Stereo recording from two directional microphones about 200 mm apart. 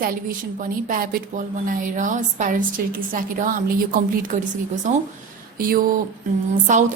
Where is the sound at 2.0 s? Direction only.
40° right (ahead or behind).